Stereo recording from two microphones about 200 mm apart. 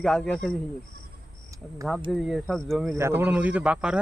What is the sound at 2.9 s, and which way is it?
A man's voice, 10° right (ahead or behind).